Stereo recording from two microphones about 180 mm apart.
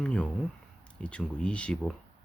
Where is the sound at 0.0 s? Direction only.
5° left (ahead or behind).